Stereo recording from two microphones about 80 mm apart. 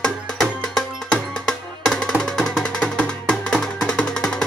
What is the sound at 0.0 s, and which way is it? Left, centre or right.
Music, centre.